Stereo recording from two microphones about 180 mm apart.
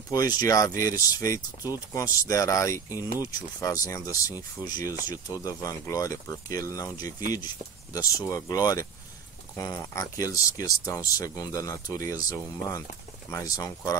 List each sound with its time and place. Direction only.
0.1 s speech: 20° left (ahead or behind)
0.7 s speech: 50° right (ahead or behind)
1.0 s speech: 20° left (ahead or behind)